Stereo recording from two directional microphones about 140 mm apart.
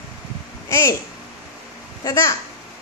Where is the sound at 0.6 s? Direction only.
20° left (ahead or behind).